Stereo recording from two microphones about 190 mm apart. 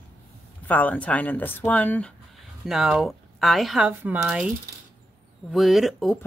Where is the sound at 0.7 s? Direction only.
10° left (ahead or behind); by 4.5 s 5° right (ahead or behind).